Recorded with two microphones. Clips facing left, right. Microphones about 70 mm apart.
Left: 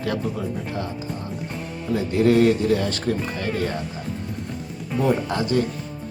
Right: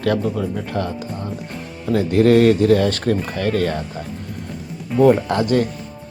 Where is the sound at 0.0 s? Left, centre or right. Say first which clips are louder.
Right 6 dB; right.